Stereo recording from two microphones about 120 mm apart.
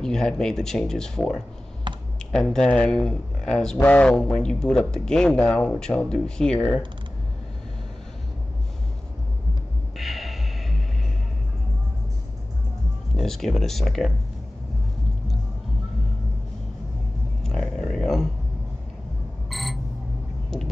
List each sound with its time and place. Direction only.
0.0 s speech: 5° left (ahead or behind)
1.9 s computer keyboard: 40° right (ahead or behind)
2.3 s speech: 5° left (ahead or behind)
9.9 s music: centre (ahead or behind)
13.2 s speech: 5° left (ahead or behind)
17.4 s a sound: 5° left (ahead or behind)
19.5 s alarm clock: centre (ahead or behind)